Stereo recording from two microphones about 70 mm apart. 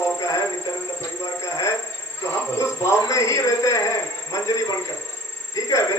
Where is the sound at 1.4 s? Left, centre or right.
Left.